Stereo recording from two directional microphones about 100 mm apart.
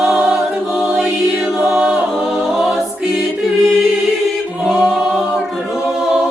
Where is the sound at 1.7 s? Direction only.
5° right (ahead or behind).